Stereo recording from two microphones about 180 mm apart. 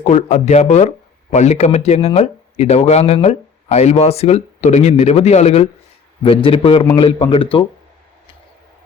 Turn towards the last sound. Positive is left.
turn(degrees=30)  # may be behind; listen again after turning